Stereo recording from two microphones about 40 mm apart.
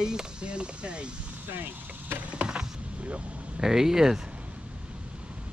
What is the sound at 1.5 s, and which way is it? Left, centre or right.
Speech, right.